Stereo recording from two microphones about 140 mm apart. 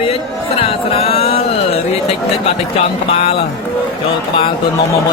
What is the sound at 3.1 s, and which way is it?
Music, 45° left (ahead or behind).